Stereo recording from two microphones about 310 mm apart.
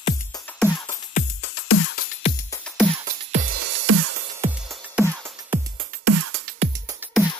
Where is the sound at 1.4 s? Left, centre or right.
Left.